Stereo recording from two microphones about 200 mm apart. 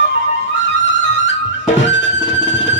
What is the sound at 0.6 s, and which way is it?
Music, 60° left (ahead or behind).